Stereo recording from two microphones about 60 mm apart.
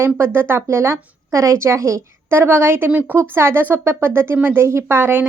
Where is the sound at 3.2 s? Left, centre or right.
Right.